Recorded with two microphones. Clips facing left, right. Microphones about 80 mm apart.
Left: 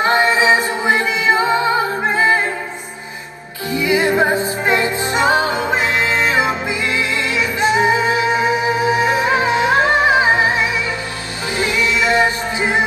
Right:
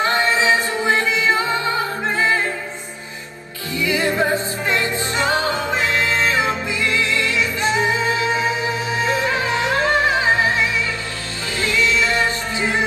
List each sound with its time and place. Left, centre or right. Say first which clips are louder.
0.0 s music: left 4 dB; left
3.7 s music: left 4 dB; left